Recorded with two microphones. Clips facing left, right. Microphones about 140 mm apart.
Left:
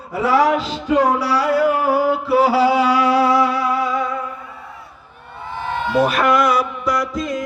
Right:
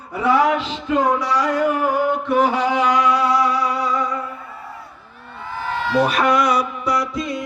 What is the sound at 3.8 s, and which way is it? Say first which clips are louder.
Humming: left 1 dB; centre (ahead or behind).